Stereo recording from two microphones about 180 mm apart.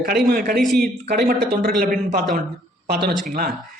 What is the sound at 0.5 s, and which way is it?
Speech, centre (ahead or behind).